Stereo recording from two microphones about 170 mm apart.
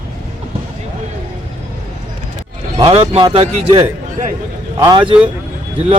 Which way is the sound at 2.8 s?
35° right (ahead or behind).